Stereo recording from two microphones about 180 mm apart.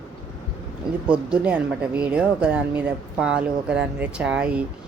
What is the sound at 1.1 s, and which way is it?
Speech, 5° right (ahead or behind).